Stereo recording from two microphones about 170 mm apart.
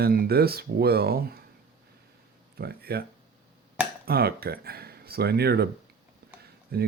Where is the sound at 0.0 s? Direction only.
60° right (ahead or behind).